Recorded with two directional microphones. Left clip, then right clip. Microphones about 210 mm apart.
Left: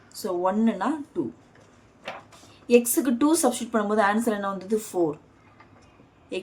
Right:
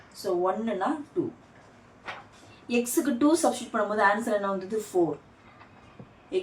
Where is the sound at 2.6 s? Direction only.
40° left (ahead or behind).